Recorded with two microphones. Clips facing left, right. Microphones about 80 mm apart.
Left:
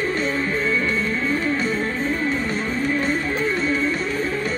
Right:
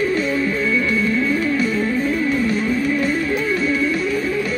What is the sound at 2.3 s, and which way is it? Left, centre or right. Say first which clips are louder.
Music: right 5 dB; centre.